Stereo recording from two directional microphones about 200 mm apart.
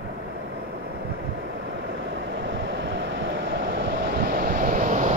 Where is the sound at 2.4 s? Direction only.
65° right (ahead or behind); by 5.1 s 40° right (ahead or behind).